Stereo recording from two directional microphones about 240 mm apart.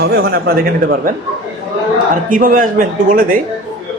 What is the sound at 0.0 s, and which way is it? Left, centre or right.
Speech, right.